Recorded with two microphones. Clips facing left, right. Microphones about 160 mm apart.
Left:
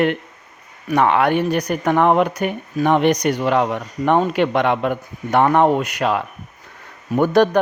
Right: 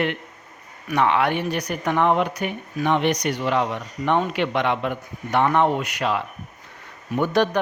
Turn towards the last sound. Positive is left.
turn(degrees=45)  # may be behind; listen again after turning